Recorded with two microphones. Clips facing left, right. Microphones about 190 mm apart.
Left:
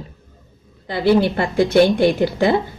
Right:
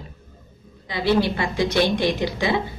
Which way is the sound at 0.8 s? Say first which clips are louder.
Left 6 dB; 55° left (ahead or behind).